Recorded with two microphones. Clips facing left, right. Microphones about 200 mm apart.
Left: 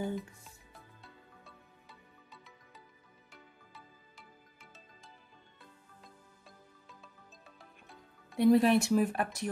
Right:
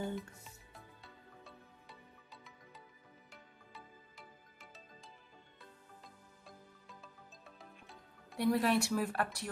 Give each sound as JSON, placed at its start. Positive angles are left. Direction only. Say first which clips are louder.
{"t": 0.1, "sound": "music", "louder": "left 4 dB", "side_deg": 0}
{"t": 8.4, "sound": "speech", "louder": "left 7 dB", "side_deg": 25}